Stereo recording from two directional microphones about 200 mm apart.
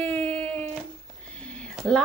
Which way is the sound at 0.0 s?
10° left (ahead or behind).